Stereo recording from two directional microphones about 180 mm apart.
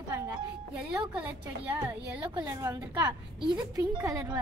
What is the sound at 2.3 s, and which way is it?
A woman's voice, 20° right (ahead or behind).